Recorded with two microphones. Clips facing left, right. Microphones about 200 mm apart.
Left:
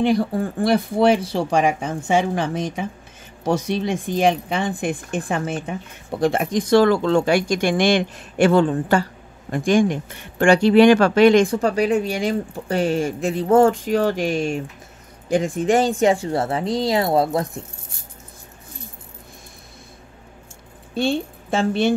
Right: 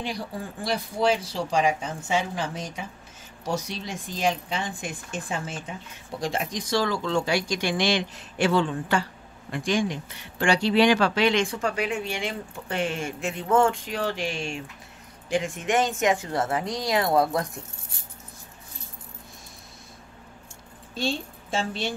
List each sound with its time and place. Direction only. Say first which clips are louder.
0.0 s speech: left 13 dB; 55° left (ahead or behind); by 17.5 s 25° left (ahead or behind)
20.9 s a woman's voice: left 8 dB; 60° left (ahead or behind)